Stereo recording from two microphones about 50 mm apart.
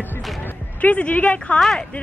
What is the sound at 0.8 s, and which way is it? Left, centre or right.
Speech, left.